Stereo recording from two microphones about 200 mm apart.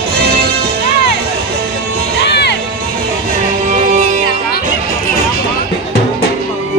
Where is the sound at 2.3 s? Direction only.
55° left (ahead or behind).